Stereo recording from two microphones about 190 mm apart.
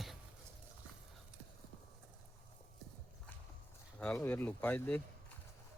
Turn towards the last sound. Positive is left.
turn(degrees=10)  # may be behind; listen again after turning